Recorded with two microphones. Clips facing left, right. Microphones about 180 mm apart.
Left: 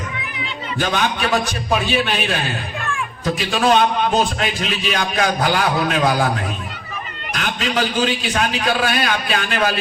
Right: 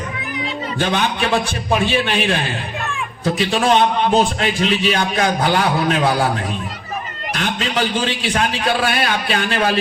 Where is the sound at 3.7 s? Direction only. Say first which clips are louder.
Right 1 dB; 30° right (ahead or behind).